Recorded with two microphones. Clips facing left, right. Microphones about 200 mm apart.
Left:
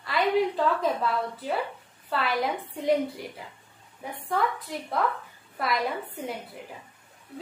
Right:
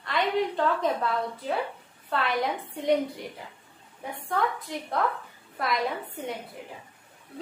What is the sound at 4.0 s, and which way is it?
A woman's voice, centre (ahead or behind).